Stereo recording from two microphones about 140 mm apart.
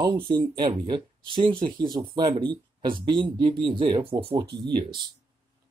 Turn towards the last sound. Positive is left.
turn(degrees=-35)  # may be behind; listen again after turning